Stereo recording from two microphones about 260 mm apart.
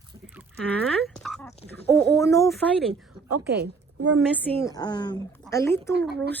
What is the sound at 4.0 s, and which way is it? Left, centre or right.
Speech, right.